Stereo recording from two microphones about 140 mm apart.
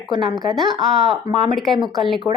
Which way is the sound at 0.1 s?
30° right (ahead or behind).